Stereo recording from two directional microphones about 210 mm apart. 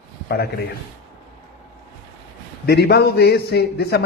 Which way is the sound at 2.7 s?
50° left (ahead or behind).